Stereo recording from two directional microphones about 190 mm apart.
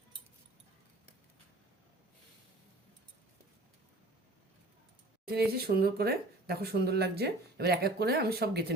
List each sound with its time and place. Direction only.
5.2 s speech: 55° right (ahead or behind)